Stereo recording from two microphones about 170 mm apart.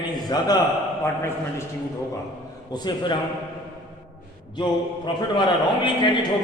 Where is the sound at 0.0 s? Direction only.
25° left (ahead or behind).